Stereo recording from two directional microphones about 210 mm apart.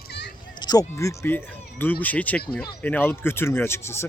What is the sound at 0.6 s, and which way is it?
Speech, 15° left (ahead or behind).